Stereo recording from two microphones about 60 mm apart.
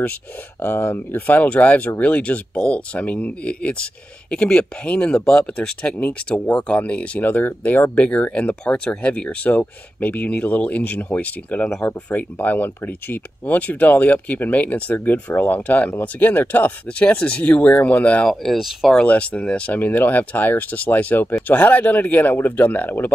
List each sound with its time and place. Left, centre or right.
0.6 s speech: left
18.4 s speech: centre
19.0 s speech: left